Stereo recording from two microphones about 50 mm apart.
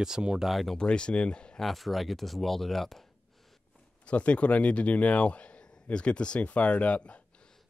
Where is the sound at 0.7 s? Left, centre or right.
Centre.